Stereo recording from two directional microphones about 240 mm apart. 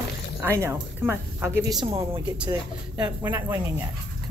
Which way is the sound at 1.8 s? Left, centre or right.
Right.